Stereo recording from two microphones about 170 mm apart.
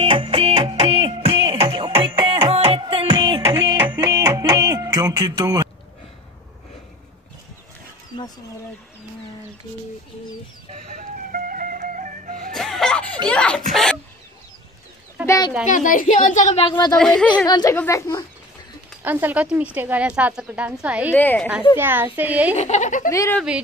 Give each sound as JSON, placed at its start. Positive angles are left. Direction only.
{"t": 0.0, "sound": "music", "side_deg": -30}
{"t": 10.9, "sound": "music", "side_deg": -55}
{"t": 12.5, "sound": "a sound", "side_deg": 0}
{"t": 13.3, "sound": "speech", "side_deg": 5}
{"t": 15.2, "sound": "speech", "side_deg": 20}
{"t": 15.6, "sound": "speech", "side_deg": 50}
{"t": 16.6, "sound": "speech", "side_deg": 25}
{"t": 16.9, "sound": "speech", "side_deg": 5}
{"t": 17.5, "sound": "speech", "side_deg": 25}
{"t": 19.0, "sound": "a woman's voice", "side_deg": -10}
{"t": 21.1, "sound": "speech", "side_deg": 10}
{"t": 21.7, "sound": "a woman's voice", "side_deg": -15}
{"t": 22.6, "sound": "speech", "side_deg": 45}
{"t": 23.0, "sound": "speech", "side_deg": 20}